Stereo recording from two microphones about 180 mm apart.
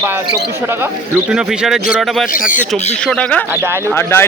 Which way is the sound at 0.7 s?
10° right (ahead or behind).